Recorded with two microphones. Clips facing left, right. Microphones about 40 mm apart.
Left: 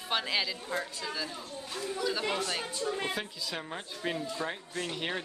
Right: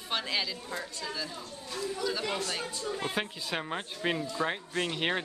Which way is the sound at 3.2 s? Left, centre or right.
Right.